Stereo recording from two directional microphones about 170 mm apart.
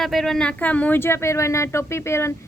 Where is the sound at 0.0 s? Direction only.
Centre (ahead or behind).